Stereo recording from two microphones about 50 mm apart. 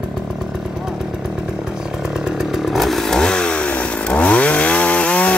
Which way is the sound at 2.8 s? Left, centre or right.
Centre.